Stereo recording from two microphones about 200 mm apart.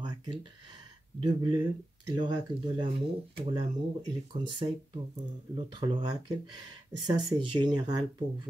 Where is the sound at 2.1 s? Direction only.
20° right (ahead or behind).